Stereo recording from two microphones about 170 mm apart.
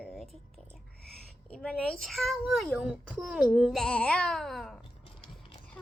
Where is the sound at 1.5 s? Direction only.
5° left (ahead or behind).